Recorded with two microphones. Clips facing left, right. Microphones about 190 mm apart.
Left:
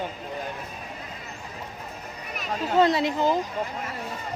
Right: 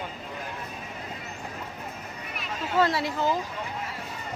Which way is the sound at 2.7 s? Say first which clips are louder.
Left 4 dB; 20° left (ahead or behind).